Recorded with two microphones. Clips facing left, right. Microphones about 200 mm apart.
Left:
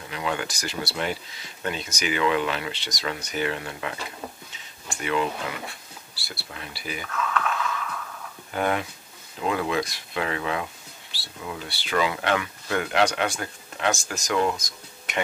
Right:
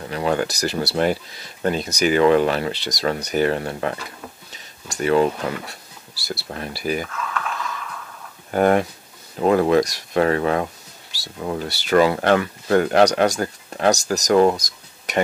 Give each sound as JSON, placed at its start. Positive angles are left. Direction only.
{"t": 0.1, "sound": "speech", "side_deg": -40}
{"t": 7.0, "sound": "a sound", "side_deg": -5}
{"t": 8.5, "sound": "speech", "side_deg": -45}